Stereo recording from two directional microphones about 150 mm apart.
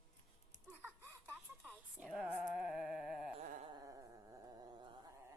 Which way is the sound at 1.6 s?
Centre (ahead or behind).